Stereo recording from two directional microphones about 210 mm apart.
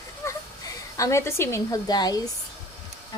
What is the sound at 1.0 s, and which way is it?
Speech, 15° left (ahead or behind).